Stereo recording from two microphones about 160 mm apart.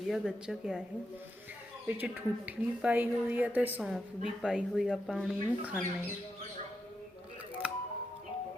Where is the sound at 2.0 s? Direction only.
10° right (ahead or behind).